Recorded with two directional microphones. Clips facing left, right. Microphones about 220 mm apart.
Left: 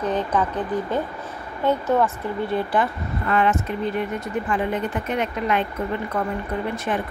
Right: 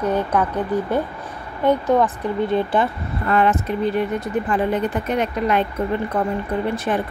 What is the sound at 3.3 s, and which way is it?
Speech, 40° right (ahead or behind).